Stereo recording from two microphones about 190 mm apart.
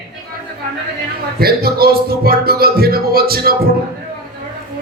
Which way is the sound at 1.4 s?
55° right (ahead or behind).